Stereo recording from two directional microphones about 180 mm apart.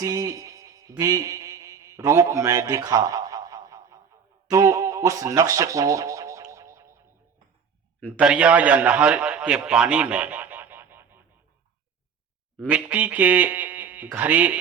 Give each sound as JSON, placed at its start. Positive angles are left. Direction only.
{"t": 0.0, "sound": "music", "side_deg": -20}
{"t": 8.2, "sound": "a man's voice", "side_deg": -5}
{"t": 12.6, "sound": "speech", "side_deg": -10}